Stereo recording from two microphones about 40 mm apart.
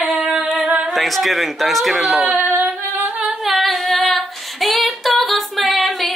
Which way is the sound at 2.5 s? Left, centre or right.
Right.